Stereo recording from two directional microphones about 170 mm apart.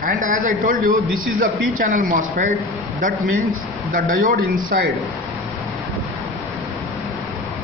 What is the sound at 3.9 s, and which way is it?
A man's voice, 50° right (ahead or behind).